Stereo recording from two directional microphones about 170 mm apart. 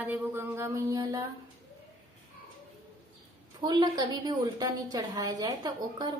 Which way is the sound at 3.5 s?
25° right (ahead or behind).